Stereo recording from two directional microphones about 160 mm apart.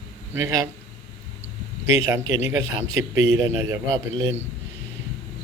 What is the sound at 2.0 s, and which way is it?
A man's voice, 20° right (ahead or behind).